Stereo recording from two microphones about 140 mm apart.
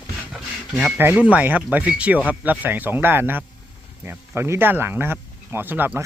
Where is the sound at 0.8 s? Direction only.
15° right (ahead or behind).